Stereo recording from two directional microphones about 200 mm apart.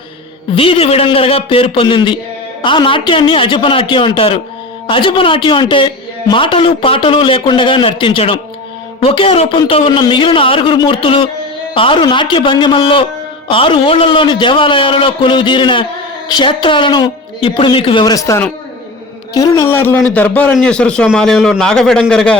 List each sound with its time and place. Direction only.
0.5 s a man's voice: 25° left (ahead or behind); by 22.4 s 5° left (ahead or behind)